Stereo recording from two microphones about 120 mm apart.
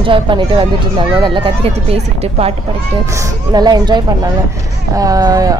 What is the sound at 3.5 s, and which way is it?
Speech, 35° right (ahead or behind).